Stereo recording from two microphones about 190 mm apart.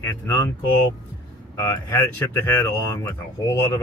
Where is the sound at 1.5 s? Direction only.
15° left (ahead or behind).